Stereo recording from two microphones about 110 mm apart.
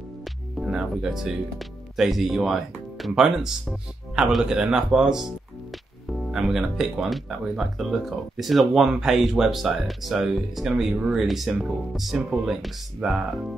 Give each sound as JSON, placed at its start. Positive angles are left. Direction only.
{"t": 0.2, "sound": "speech", "side_deg": -5}